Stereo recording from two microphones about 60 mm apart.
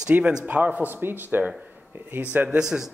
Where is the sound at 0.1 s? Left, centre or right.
Centre.